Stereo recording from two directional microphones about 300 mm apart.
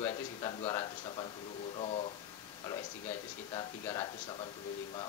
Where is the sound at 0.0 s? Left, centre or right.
Centre.